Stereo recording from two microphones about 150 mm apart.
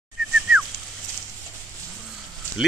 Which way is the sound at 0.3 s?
5° right (ahead or behind).